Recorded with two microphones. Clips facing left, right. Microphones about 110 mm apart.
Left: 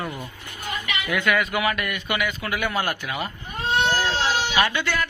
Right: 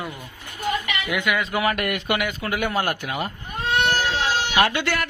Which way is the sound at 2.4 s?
40° right (ahead or behind).